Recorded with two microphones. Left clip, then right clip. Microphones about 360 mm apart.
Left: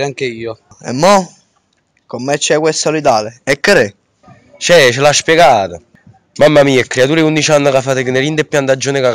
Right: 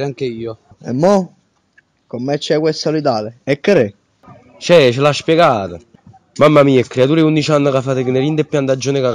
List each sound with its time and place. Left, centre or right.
0.0 s a man's voice: left
0.7 s a man's voice: left